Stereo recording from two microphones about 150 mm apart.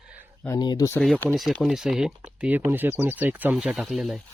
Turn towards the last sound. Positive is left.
turn(degrees=0)  # may be behind; listen again after turning